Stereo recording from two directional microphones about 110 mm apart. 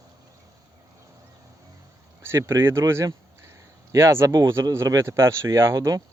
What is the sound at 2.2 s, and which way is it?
Speech, 20° right (ahead or behind).